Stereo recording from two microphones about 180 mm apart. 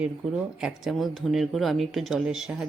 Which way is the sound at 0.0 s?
5° right (ahead or behind).